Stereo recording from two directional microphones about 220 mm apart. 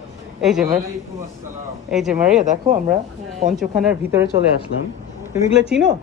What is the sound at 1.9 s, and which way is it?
Speech, 5° right (ahead or behind).